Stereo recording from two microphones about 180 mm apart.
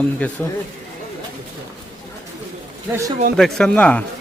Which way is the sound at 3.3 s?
5° left (ahead or behind).